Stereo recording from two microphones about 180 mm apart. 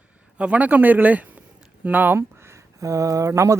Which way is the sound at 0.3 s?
5° right (ahead or behind).